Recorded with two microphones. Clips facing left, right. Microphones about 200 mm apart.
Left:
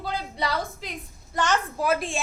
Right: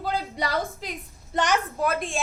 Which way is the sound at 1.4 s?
20° right (ahead or behind).